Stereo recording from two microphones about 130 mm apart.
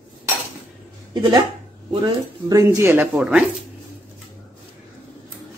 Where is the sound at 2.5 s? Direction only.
25° right (ahead or behind).